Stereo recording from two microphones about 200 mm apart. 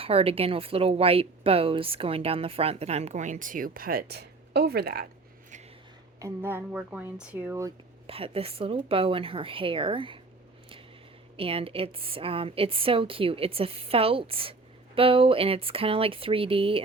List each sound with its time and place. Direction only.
0.0 s a woman's voice: 30° right (ahead or behind); by 5.0 s 50° right (ahead or behind)
6.1 s speech: 15° right (ahead or behind)
8.0 s a woman's voice: 30° right (ahead or behind)
11.3 s a woman's voice: 30° right (ahead or behind)